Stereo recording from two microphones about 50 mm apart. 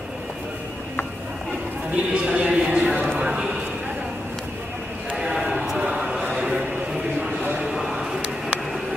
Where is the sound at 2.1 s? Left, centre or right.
Right.